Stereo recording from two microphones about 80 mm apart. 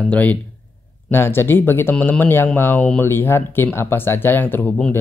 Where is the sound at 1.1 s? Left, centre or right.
Left.